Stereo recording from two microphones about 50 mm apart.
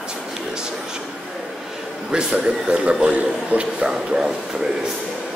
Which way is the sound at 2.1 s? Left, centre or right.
Right.